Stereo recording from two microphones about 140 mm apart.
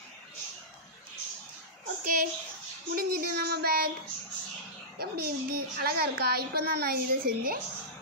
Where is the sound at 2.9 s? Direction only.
90° right.